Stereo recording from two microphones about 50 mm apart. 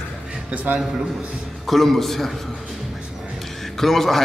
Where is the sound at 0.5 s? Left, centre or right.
Right.